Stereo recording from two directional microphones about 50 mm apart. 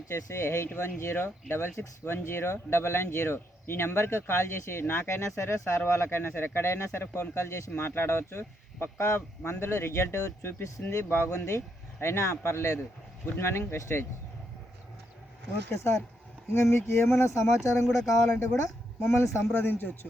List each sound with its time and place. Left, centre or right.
0.1 s speech: left
1.1 s speech: left
7.8 s speech: left
13.4 s speech: left
15.7 s speech: left
16.7 s speech: left
17.2 s speech: left
19.5 s speech: left